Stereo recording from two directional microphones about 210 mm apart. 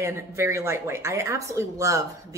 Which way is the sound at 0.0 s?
15° right (ahead or behind).